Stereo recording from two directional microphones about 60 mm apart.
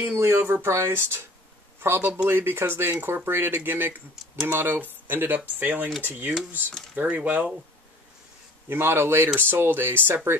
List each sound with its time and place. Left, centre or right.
0.0 s speech: right
8.6 s speech: right